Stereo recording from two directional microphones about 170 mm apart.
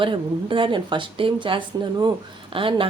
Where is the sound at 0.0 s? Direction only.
30° right (ahead or behind).